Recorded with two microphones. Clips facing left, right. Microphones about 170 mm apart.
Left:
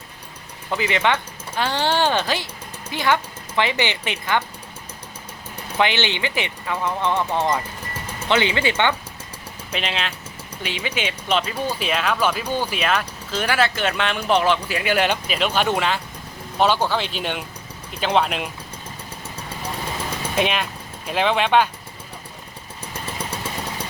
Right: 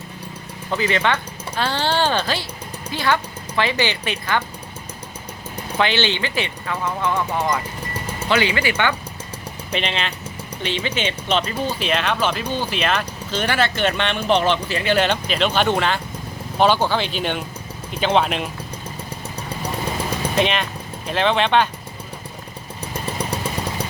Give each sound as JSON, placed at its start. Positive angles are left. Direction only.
{"t": 0.8, "sound": "speech", "side_deg": 15}
{"t": 5.7, "sound": "speech", "side_deg": 15}
{"t": 9.7, "sound": "speech", "side_deg": 5}
{"t": 20.3, "sound": "speech", "side_deg": 5}